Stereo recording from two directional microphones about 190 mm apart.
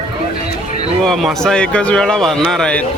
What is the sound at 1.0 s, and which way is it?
A man's voice, 5° left (ahead or behind).